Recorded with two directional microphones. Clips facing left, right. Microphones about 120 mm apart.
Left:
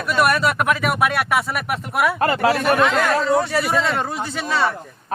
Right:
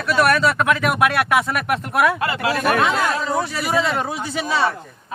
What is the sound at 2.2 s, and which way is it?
Speech, 40° left (ahead or behind).